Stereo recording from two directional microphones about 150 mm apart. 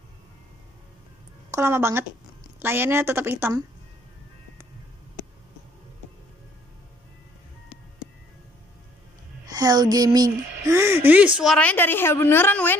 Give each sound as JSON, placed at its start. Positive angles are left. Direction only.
{"t": 1.5, "sound": "a woman's voice", "side_deg": -15}
{"t": 9.5, "sound": "speech", "side_deg": -25}
{"t": 11.3, "sound": "a woman's voice", "side_deg": 5}